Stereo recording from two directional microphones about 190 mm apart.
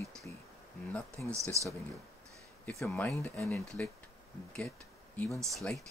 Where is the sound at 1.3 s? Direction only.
15° right (ahead or behind).